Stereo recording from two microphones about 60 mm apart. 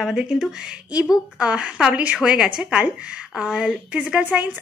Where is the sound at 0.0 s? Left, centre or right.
Centre.